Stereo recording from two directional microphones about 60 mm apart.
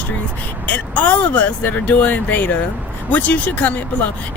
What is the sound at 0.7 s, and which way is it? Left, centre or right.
Speech, left.